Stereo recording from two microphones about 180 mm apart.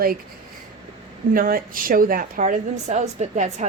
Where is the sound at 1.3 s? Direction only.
50° right (ahead or behind).